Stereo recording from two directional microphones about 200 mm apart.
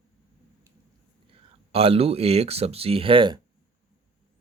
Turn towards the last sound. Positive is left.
turn(degrees=-25)  # may be behind; listen again after turning